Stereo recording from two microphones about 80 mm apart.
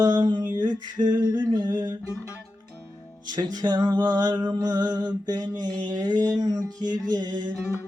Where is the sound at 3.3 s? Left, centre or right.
Right.